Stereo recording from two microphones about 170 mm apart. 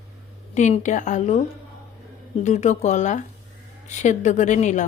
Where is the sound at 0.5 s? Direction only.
45° left (ahead or behind).